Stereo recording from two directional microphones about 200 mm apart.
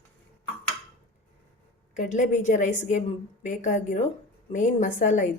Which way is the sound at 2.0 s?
40° left (ahead or behind).